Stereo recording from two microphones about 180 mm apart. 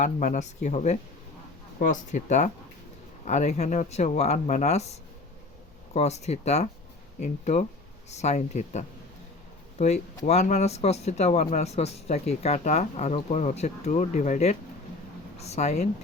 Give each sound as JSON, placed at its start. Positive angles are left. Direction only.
{"t": 0.0, "sound": "speech", "side_deg": 45}